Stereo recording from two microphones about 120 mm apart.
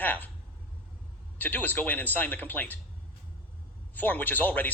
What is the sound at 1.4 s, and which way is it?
Speech, 15° left (ahead or behind).